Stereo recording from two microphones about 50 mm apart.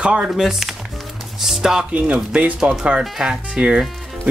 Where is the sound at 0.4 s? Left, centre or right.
Centre.